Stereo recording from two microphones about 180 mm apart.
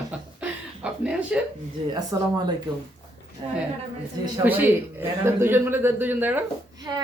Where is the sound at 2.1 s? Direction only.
20° right (ahead or behind).